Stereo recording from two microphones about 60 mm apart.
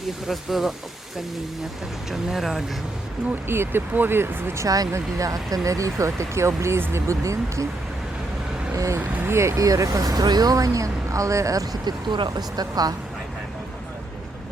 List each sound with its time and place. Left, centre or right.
0.3 s speech: centre
2.0 s speech: centre
3.4 s speech: right
4.6 s speech: right
4.9 s speech: right
8.7 s speech: right
9.0 s speech: right
9.6 s speech: right
12.4 s speech: right